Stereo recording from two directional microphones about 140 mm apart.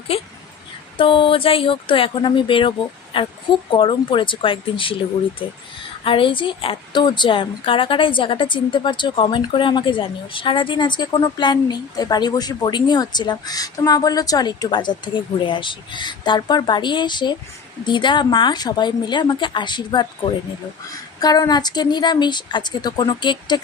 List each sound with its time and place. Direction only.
0.1 s speech: 45° left (ahead or behind)